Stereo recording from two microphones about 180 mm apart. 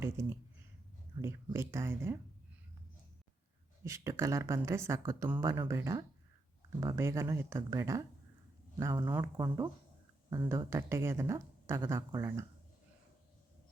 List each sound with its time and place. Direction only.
0.0 s speech: 10° right (ahead or behind)
3.8 s speech: 15° right (ahead or behind)